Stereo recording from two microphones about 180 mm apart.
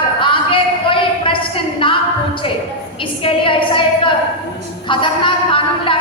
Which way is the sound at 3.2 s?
30° left (ahead or behind).